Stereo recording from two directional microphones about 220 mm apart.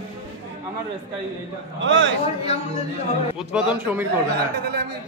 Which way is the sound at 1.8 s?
55° right (ahead or behind).